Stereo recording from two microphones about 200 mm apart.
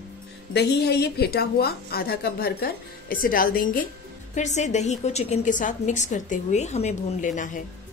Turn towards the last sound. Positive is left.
turn(degrees=40)  # may be behind; listen again after turning